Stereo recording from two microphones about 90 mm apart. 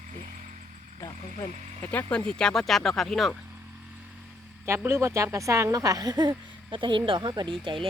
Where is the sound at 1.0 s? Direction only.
35° left (ahead or behind).